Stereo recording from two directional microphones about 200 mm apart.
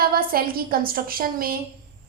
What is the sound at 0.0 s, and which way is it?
A woman's voice, 45° right (ahead or behind).